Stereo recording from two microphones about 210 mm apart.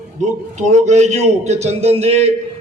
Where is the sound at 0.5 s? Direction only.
35° right (ahead or behind).